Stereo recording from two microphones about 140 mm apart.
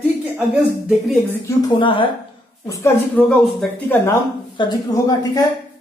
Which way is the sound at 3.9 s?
20° left (ahead or behind).